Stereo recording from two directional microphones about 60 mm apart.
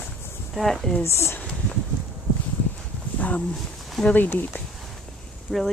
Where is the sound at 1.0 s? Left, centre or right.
Left.